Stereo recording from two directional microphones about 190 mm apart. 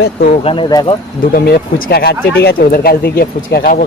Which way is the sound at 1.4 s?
55° left (ahead or behind).